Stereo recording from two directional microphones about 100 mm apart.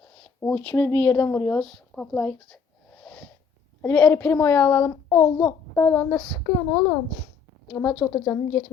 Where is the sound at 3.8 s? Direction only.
15° left (ahead or behind).